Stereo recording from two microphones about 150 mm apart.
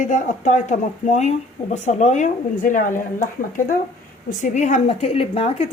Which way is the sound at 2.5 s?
65° left (ahead or behind).